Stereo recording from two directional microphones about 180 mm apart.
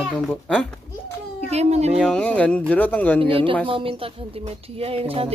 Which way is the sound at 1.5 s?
35° right (ahead or behind).